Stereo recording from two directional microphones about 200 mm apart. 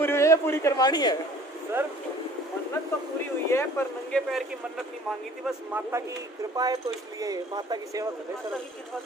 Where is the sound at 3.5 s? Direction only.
10° left (ahead or behind).